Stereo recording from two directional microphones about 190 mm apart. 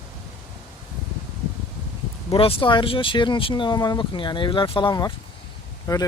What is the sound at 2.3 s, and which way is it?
Speech, 25° left (ahead or behind).